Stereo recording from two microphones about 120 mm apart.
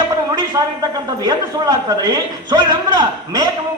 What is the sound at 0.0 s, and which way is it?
A man's voice, 35° right (ahead or behind).